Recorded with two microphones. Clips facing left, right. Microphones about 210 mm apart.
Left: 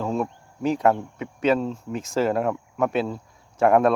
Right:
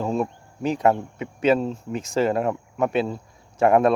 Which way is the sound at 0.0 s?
Centre (ahead or behind).